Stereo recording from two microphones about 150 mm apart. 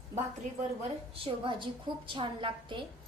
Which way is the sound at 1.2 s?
35° right (ahead or behind).